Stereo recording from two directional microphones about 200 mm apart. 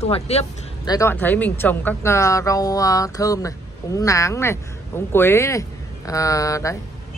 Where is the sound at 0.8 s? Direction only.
15° left (ahead or behind).